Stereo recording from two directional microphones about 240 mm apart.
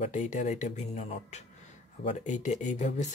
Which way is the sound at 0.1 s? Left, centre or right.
Left.